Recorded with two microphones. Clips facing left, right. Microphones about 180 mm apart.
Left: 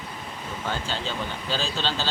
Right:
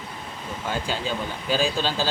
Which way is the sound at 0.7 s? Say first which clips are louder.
Right 3 dB; 10° right (ahead or behind).